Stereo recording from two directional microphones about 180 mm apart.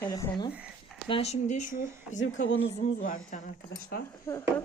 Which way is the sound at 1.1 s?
35° left (ahead or behind).